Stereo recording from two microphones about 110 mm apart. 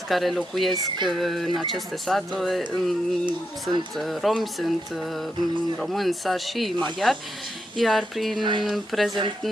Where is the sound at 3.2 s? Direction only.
45° right (ahead or behind).